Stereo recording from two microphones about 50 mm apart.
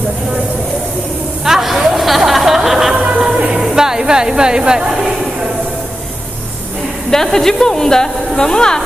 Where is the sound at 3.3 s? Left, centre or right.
Centre.